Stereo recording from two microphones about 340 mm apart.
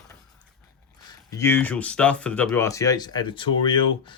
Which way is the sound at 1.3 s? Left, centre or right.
Centre.